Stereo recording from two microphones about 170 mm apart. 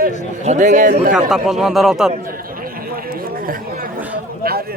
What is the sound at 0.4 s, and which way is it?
Speech, 45° right (ahead or behind).